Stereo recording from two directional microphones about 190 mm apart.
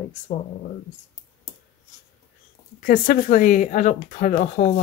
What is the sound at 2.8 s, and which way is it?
Speech, 50° left (ahead or behind).